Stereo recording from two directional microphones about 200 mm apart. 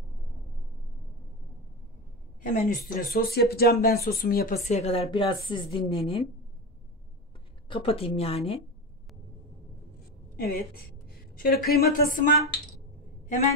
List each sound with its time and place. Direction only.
2.5 s speech: 45° left (ahead or behind)
4.6 s a woman's voice: 30° left (ahead or behind)
7.6 s a woman's voice: 25° left (ahead or behind)
10.4 s speech: 50° left (ahead or behind)